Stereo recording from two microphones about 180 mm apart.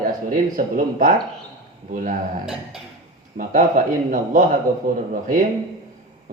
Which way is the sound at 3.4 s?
45° right (ahead or behind).